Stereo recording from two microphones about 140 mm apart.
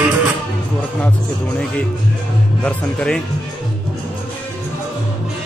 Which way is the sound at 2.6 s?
10° left (ahead or behind).